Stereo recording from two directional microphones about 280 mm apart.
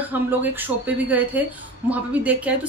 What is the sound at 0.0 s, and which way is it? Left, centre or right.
A woman's voice, centre.